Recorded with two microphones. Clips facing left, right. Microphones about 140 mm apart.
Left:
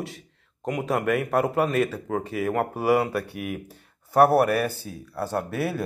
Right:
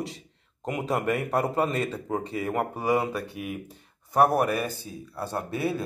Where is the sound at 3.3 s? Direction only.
65° left (ahead or behind).